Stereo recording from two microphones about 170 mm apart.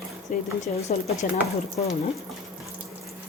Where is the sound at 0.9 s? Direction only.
40° left (ahead or behind).